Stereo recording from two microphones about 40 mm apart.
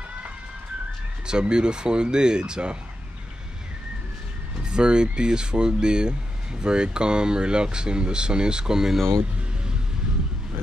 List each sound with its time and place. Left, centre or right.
1.2 s speech: right
4.6 s speech: right